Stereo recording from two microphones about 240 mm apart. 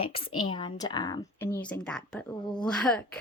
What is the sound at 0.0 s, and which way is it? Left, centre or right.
A woman's voice, left.